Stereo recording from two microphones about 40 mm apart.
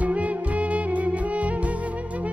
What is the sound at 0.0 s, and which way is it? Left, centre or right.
Music, right.